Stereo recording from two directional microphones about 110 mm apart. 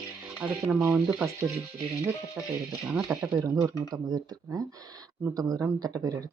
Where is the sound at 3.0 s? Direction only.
5° right (ahead or behind).